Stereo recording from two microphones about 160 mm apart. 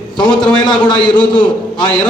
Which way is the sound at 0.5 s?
30° left (ahead or behind).